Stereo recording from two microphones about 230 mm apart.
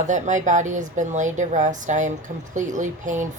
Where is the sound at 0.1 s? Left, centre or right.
Right.